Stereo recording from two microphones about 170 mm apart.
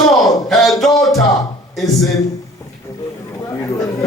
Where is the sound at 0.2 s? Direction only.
Centre (ahead or behind).